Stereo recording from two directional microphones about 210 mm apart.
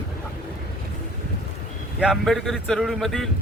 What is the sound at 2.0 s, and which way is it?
Speech, centre (ahead or behind).